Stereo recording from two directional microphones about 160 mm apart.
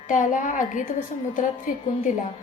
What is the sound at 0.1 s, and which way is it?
Speech, 55° left (ahead or behind).